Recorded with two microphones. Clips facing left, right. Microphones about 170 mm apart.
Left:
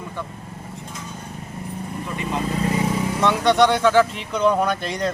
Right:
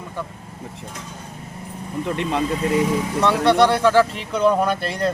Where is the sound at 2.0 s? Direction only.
70° right (ahead or behind).